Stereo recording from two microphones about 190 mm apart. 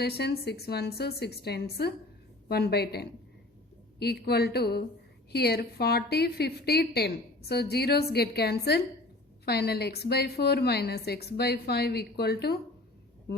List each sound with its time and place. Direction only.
0.0 s a woman's voice: 60° left (ahead or behind)